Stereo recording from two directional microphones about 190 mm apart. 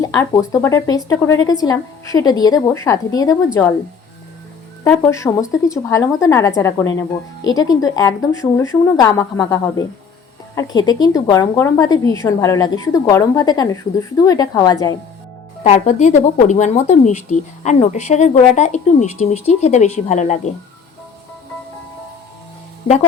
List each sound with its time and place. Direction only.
0.0 s a woman's voice: 15° left (ahead or behind)
4.8 s a woman's voice: 15° left (ahead or behind)
15.6 s speech: 40° left (ahead or behind)
22.8 s speech: 30° left (ahead or behind)